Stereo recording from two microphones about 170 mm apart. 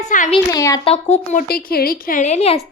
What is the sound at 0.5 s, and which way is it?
Speech, 20° left (ahead or behind).